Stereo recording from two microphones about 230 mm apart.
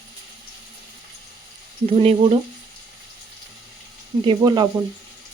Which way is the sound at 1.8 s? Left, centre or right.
Right.